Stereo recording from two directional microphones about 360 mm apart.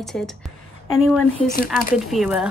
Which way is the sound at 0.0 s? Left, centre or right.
Centre.